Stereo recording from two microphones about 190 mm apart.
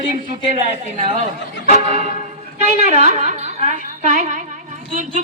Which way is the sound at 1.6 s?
35° right (ahead or behind).